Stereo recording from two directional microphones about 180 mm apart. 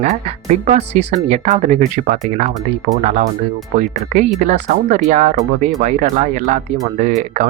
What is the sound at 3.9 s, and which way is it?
Speech, 40° right (ahead or behind).